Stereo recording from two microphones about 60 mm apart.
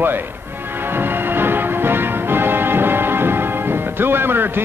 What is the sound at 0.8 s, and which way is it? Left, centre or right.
Music, right.